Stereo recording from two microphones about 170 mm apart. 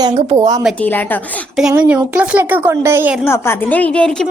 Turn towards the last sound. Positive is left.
turn(degrees=5)  # may be behind; listen again after turning